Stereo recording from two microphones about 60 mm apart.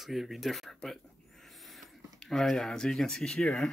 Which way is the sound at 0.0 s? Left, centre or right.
Centre.